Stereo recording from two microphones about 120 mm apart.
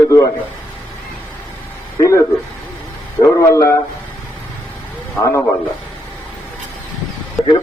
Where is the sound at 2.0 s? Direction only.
25° left (ahead or behind).